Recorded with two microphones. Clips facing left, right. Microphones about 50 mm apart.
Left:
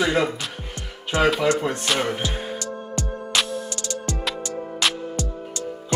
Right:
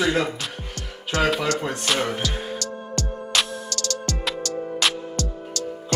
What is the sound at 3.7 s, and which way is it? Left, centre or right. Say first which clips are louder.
Music: right 1 dB; left.